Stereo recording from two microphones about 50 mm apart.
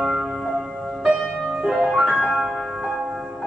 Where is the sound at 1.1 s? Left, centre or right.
Centre.